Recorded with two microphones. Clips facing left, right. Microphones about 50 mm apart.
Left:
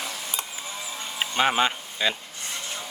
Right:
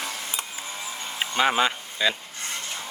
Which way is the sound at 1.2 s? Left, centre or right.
Centre.